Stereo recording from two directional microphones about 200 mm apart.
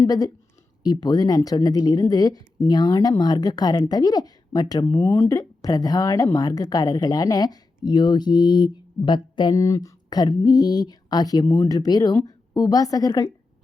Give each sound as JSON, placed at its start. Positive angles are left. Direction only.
{"t": 0.0, "sound": "a woman's voice", "side_deg": 20}